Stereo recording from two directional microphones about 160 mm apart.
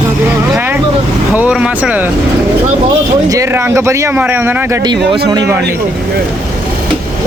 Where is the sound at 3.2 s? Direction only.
20° right (ahead or behind).